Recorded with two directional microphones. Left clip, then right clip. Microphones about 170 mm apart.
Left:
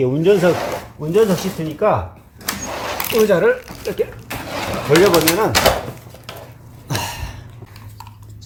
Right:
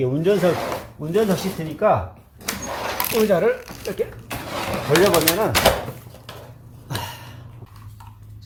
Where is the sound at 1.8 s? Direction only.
25° left (ahead or behind).